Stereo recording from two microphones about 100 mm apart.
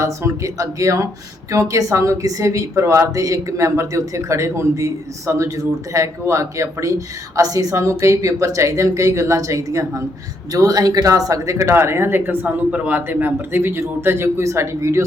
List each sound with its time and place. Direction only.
0.0 s speech: 30° right (ahead or behind)